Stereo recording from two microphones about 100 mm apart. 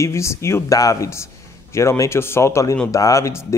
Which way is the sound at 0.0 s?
30° left (ahead or behind).